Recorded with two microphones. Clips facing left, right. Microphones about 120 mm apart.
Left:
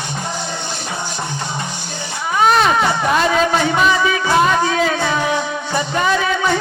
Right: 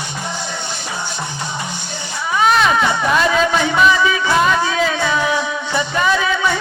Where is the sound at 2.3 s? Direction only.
40° left (ahead or behind).